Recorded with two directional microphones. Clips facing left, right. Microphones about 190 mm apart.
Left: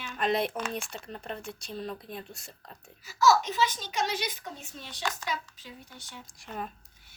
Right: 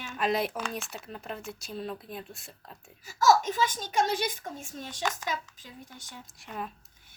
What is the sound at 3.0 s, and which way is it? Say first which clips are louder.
A woman's voice: right 1 dB; 50° right (ahead or behind).